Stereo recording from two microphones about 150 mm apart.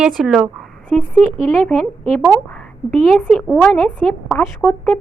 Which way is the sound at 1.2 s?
45° right (ahead or behind).